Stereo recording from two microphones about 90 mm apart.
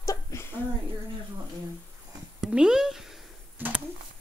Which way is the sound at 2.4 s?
10° right (ahead or behind).